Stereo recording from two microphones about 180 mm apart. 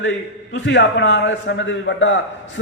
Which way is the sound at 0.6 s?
80° left.